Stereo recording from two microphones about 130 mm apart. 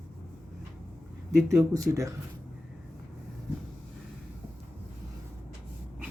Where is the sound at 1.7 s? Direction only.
25° right (ahead or behind).